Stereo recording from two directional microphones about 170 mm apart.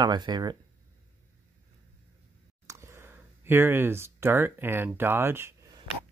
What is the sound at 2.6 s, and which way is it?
Speech, 15° right (ahead or behind).